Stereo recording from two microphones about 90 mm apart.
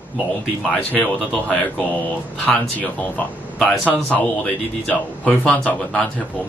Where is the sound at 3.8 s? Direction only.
15° left (ahead or behind).